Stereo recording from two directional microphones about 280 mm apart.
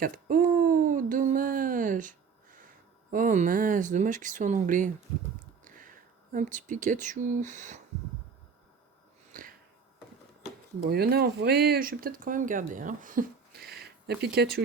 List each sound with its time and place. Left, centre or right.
0.0 s speech: right
9.3 s a sound: right
10.8 s speech: right